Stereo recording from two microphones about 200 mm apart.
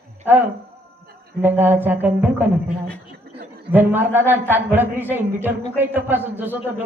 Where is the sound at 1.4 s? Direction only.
10° right (ahead or behind).